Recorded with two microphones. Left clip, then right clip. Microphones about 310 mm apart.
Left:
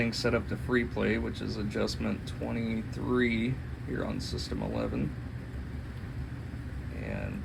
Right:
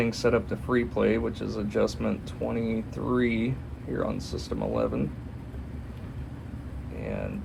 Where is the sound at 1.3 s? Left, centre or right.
Centre.